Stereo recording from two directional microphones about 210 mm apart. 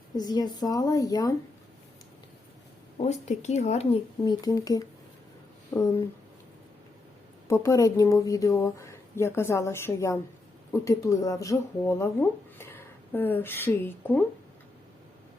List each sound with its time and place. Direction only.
0.2 s speech: 20° left (ahead or behind)
3.0 s speech: 30° left (ahead or behind)
4.3 s speech: 15° left (ahead or behind)
7.4 s speech: 15° left (ahead or behind)